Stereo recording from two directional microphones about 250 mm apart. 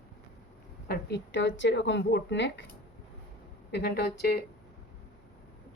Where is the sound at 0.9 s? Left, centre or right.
Left.